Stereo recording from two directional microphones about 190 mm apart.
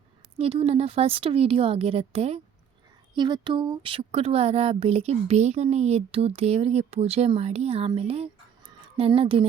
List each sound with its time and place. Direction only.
0.3 s speech: 30° right (ahead or behind)